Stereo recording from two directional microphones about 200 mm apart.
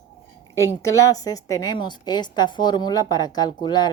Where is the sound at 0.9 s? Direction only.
15° left (ahead or behind).